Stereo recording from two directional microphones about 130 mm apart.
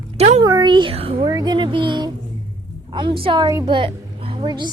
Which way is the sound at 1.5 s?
40° right (ahead or behind).